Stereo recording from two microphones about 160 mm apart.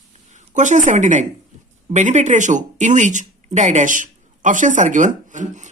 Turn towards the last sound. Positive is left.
turn(degrees=-50)  # may be behind; listen again after turning